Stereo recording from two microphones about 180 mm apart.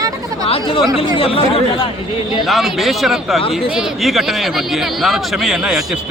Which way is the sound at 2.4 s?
Centre (ahead or behind).